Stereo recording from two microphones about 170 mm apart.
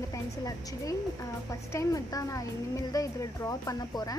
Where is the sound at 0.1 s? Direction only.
20° left (ahead or behind).